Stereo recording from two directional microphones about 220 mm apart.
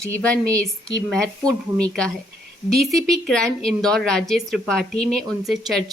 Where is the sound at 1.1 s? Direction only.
5° left (ahead or behind).